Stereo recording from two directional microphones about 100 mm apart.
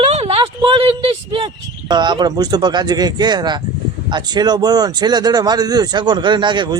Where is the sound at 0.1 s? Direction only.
90° right; by 1.5 s 60° right (ahead or behind).